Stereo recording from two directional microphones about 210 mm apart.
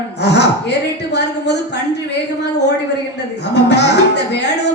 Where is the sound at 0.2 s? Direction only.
55° left (ahead or behind).